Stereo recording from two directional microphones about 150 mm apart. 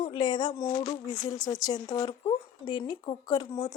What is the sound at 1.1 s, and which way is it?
Speech, 25° left (ahead or behind).